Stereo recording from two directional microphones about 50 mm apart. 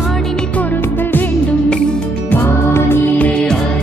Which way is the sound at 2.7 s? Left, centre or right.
Left.